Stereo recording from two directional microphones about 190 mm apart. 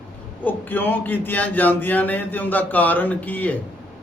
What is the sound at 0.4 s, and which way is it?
A man's voice, 10° left (ahead or behind).